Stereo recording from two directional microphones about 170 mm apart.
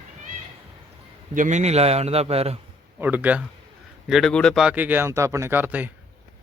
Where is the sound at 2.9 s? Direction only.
10° right (ahead or behind).